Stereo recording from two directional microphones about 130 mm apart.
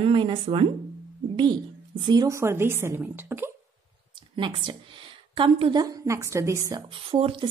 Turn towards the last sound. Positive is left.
turn(degrees=-45)  # may be behind; listen again after turning